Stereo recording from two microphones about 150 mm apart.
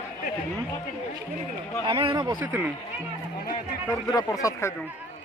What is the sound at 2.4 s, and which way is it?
Speech, 15° right (ahead or behind).